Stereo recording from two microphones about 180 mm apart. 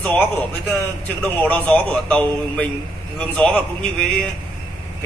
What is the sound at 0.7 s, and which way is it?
A man's voice, 10° left (ahead or behind).